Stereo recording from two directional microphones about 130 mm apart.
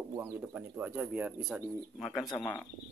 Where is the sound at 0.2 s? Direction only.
10° right (ahead or behind).